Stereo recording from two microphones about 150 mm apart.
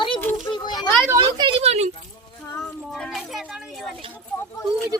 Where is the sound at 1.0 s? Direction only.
25° right (ahead or behind); by 1.9 s 45° right (ahead or behind).